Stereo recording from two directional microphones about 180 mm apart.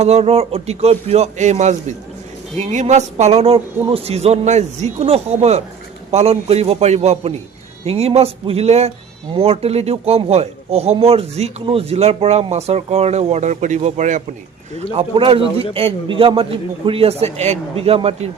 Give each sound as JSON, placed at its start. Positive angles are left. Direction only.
{"t": 0.0, "sound": "a man's voice", "side_deg": -35}
{"t": 14.9, "sound": "a man's voice", "side_deg": -30}